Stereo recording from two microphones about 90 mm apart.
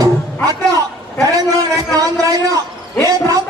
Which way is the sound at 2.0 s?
45° right (ahead or behind).